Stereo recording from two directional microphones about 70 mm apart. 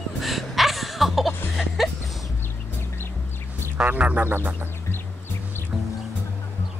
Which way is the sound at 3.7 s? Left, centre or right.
Right.